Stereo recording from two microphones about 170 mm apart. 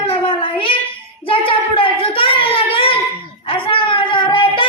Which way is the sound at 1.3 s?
30° left (ahead or behind).